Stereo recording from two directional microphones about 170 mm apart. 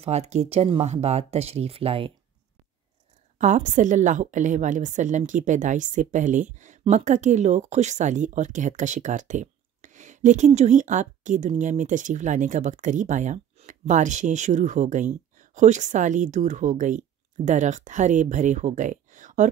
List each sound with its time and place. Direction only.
0.0 s speech: 40° right (ahead or behind)
3.3 s a woman's voice: 45° right (ahead or behind)